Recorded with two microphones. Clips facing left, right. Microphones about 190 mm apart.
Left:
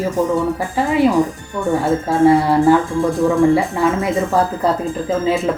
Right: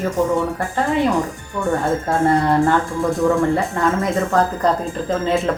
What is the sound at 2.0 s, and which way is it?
Speech, 5° left (ahead or behind).